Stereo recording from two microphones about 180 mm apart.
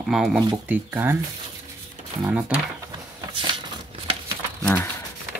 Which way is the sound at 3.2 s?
25° right (ahead or behind).